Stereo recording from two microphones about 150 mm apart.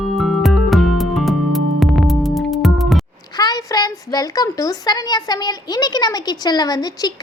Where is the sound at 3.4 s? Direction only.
25° left (ahead or behind).